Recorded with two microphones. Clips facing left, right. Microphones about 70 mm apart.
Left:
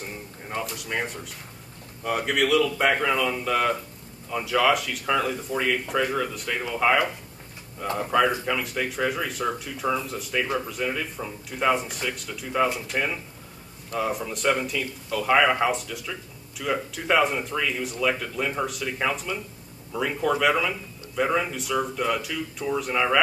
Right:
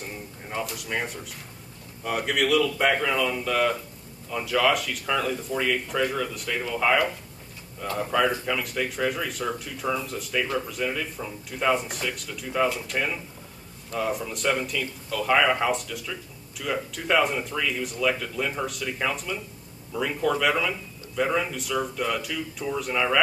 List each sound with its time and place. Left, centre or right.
0.5 s speech: centre